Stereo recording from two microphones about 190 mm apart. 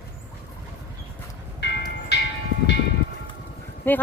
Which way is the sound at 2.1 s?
60° left (ahead or behind).